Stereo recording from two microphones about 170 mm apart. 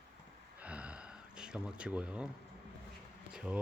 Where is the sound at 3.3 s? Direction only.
5° right (ahead or behind).